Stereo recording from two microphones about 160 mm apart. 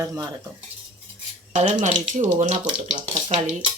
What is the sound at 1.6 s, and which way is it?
Speech, 45° right (ahead or behind).